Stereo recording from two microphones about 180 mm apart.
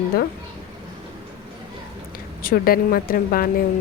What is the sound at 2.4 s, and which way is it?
A woman's voice, 55° left (ahead or behind).